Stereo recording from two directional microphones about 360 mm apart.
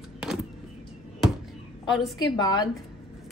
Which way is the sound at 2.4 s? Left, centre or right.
Centre.